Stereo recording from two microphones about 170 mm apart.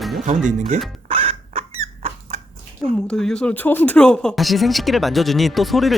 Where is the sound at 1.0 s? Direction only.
35° right (ahead or behind).